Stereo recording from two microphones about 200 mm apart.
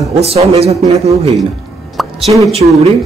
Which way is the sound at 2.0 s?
Centre (ahead or behind).